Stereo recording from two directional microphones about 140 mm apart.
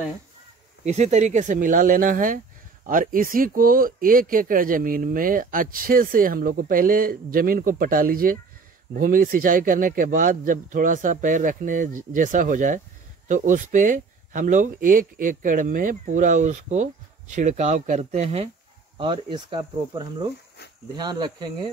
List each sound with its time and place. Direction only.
0.8 s speech: 55° right (ahead or behind)
18.9 s speech: 35° right (ahead or behind)